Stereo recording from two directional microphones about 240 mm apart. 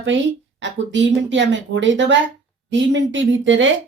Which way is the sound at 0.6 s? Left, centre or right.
Right.